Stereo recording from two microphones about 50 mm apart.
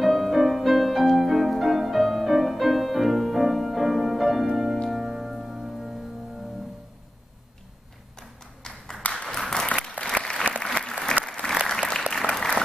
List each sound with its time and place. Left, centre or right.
0.0 s music: centre
8.2 s a sound: centre
9.2 s applause: centre